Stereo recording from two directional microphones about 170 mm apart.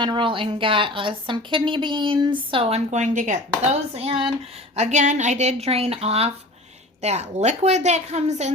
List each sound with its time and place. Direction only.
0.0 s speech: 30° right (ahead or behind)